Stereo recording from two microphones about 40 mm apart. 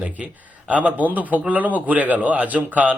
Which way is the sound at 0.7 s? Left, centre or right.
Right.